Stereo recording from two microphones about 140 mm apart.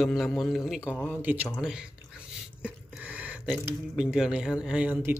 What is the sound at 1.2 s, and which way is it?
Speech, 15° right (ahead or behind).